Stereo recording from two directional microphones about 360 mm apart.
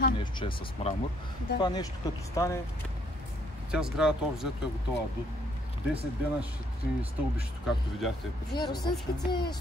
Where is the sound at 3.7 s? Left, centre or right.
Centre.